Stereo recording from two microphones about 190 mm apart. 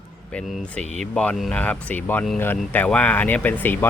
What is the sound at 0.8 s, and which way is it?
Speech, 35° right (ahead or behind).